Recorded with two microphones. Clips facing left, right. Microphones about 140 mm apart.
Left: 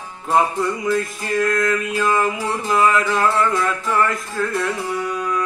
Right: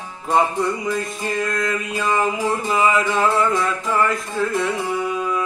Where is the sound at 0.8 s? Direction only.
Centre (ahead or behind).